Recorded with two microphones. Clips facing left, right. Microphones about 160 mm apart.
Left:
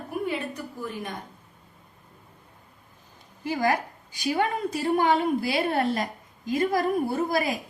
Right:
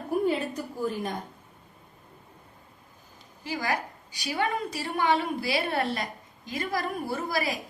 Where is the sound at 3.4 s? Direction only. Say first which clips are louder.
Left 5 dB; 50° left (ahead or behind).